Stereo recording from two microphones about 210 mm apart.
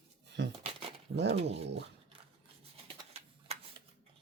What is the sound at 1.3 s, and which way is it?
Speech, 30° right (ahead or behind).